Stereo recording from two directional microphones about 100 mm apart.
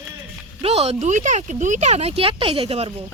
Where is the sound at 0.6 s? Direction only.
85° right.